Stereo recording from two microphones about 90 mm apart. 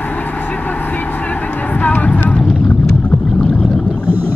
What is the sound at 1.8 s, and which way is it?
Vehicle, 15° left (ahead or behind).